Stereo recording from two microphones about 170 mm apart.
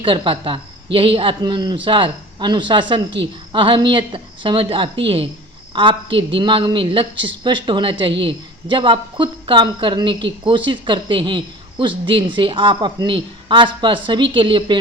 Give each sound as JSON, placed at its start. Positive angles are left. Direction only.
{"t": 0.0, "sound": "a woman's voice", "side_deg": -30}